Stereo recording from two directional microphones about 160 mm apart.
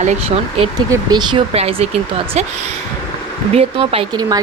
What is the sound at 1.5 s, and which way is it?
Speech, 40° right (ahead or behind).